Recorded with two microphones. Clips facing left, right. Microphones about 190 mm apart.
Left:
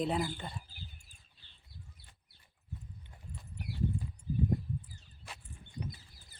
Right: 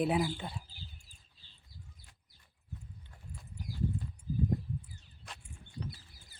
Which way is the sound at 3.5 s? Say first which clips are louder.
Left 1 dB; 65° left (ahead or behind).